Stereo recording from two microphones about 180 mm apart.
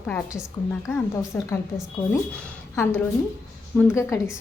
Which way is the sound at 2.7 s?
15° left (ahead or behind).